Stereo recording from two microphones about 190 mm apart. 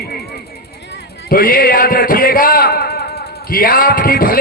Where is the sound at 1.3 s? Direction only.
50° left (ahead or behind).